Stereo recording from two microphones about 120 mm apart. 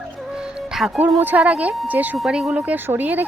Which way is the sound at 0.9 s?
15° right (ahead or behind).